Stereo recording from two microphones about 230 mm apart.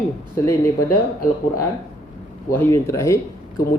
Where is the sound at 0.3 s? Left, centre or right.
Centre.